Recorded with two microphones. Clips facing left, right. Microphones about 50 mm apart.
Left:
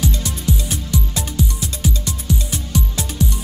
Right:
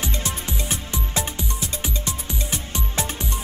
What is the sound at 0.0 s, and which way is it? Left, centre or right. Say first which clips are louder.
Music: left 5 dB; right.